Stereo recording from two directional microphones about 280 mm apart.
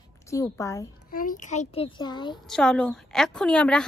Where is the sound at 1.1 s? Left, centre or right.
Left.